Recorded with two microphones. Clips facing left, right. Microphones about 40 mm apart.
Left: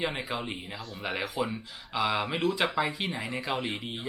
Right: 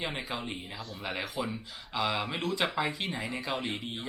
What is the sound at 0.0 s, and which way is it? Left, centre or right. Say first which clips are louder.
Speech: left 3 dB; centre.